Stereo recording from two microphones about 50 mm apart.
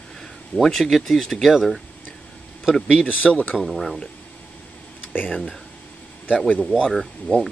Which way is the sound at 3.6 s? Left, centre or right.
Centre.